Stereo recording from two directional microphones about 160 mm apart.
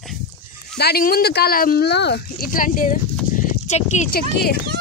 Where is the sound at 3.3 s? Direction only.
50° left (ahead or behind).